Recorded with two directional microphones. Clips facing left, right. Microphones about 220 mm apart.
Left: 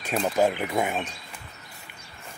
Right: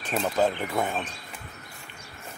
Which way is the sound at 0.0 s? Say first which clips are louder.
Left 2 dB; 10° left (ahead or behind).